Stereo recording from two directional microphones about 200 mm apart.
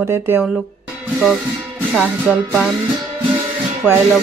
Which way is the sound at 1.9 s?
10° right (ahead or behind).